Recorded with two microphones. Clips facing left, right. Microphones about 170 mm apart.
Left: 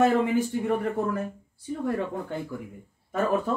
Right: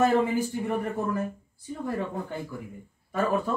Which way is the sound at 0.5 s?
90° left.